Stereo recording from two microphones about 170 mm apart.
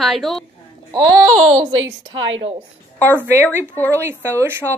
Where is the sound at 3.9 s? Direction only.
15° right (ahead or behind).